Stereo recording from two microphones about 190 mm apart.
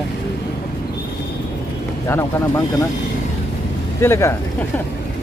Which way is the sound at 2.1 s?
15° left (ahead or behind).